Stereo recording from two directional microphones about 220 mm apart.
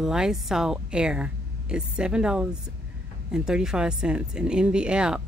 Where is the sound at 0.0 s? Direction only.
5° right (ahead or behind).